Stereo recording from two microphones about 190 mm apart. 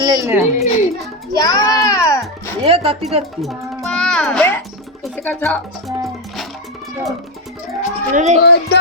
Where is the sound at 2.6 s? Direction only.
30° right (ahead or behind).